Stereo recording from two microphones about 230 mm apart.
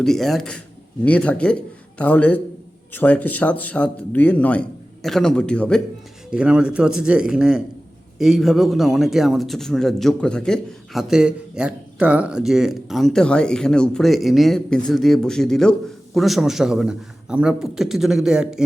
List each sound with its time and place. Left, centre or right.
0.0 s a man's voice: centre